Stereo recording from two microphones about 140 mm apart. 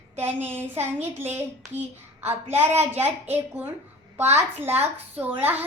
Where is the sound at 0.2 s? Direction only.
15° right (ahead or behind).